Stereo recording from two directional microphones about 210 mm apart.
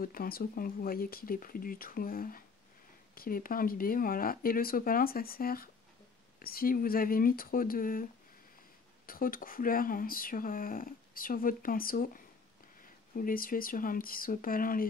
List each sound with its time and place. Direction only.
0.0 s speech: 45° left (ahead or behind)